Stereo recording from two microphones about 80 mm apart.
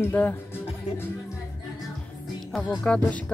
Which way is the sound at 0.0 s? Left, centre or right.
Left.